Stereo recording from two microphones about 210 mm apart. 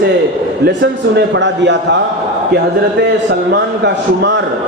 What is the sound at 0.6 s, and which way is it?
A man's voice, 55° right (ahead or behind).